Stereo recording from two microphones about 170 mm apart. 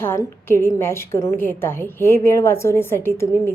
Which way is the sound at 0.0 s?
15° left (ahead or behind).